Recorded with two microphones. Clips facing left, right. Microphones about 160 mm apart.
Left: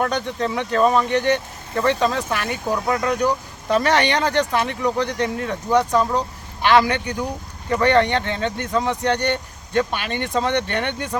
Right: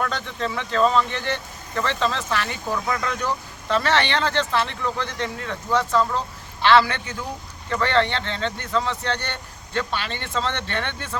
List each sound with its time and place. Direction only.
0.0 s speech: 20° left (ahead or behind)
2.5 s speech: 35° left (ahead or behind)
3.1 s speech: 15° left (ahead or behind)